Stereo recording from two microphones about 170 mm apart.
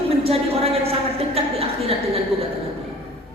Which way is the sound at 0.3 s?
35° right (ahead or behind).